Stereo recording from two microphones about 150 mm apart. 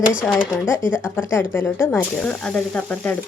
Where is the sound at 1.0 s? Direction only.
15° left (ahead or behind).